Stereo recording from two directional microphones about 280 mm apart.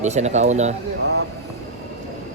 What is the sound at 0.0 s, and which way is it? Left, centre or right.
Speech, right.